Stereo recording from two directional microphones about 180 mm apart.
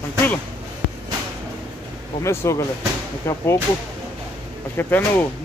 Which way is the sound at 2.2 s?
15° left (ahead or behind).